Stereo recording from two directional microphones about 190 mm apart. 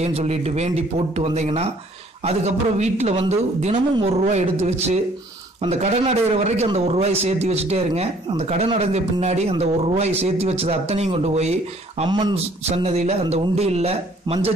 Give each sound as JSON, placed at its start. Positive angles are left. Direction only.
{"t": 0.0, "sound": "a man's voice", "side_deg": -35}
{"t": 12.1, "sound": "speech", "side_deg": -25}
{"t": 12.6, "sound": "a man's voice", "side_deg": -35}